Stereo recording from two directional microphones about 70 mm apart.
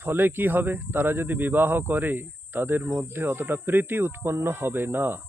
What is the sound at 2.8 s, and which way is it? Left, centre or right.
Speech, right.